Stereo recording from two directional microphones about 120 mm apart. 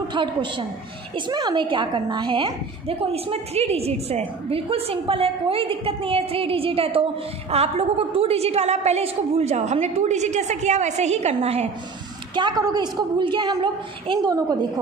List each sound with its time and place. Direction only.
0.1 s a woman's voice: 40° right (ahead or behind); by 11.7 s 60° right (ahead or behind)
12.4 s a woman's voice: 35° right (ahead or behind)